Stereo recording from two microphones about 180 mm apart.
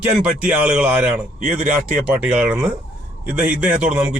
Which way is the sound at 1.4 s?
45° right (ahead or behind).